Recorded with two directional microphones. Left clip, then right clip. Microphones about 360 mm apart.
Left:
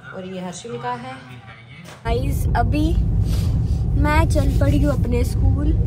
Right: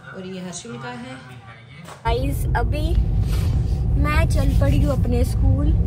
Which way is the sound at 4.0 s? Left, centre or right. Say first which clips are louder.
Left 4 dB; centre.